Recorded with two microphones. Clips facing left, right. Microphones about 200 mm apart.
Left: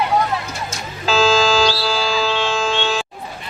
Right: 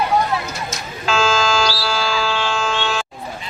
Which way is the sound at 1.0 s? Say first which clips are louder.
Left 3 dB; 35° left (ahead or behind).